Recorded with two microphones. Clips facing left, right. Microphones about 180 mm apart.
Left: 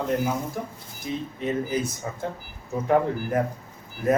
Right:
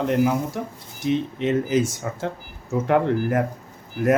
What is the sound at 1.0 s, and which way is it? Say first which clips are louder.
Speech: right 8 dB; 75° right (ahead or behind).